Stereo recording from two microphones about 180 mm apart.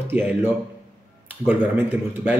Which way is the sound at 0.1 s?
10° right (ahead or behind).